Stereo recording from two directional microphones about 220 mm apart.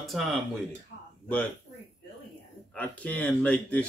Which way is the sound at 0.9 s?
45° left (ahead or behind).